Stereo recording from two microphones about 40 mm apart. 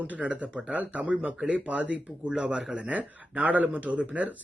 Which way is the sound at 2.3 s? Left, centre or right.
Right.